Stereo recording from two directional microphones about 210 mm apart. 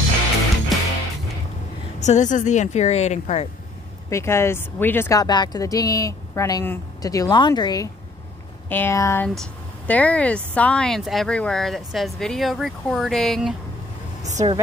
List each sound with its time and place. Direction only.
0.7 s music: centre (ahead or behind)
2.0 s a woman's voice: 35° left (ahead or behind)
4.1 s speech: 15° left (ahead or behind)
14.3 s speech: 30° right (ahead or behind)